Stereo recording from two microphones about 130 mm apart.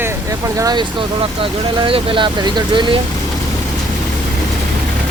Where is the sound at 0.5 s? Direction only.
30° right (ahead or behind).